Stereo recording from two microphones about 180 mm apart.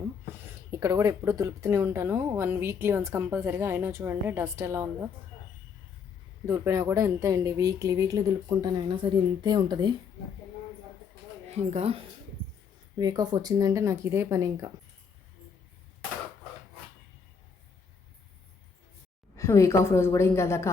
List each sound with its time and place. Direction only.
0.4 s speech: 20° right (ahead or behind)
6.5 s speech: 15° right (ahead or behind)
11.4 s speech: 35° right (ahead or behind)
13.0 s speech: 20° right (ahead or behind)
19.4 s a woman's voice: 15° left (ahead or behind)